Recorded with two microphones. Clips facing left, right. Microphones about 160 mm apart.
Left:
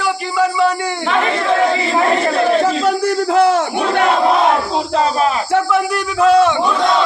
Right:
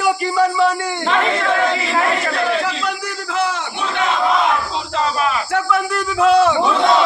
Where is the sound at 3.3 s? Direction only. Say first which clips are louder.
Left 6 dB; 45° left (ahead or behind).